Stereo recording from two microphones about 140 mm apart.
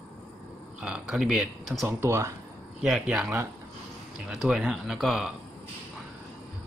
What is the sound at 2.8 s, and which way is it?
Speech, 5° right (ahead or behind).